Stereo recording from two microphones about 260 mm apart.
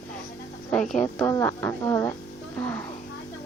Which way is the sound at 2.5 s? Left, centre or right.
Centre.